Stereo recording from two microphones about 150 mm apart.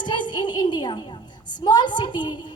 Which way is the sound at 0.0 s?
30° left (ahead or behind).